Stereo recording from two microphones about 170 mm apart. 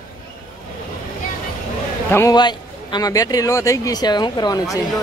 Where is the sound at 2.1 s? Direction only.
20° left (ahead or behind).